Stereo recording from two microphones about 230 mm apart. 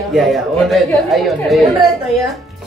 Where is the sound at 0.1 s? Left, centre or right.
Centre.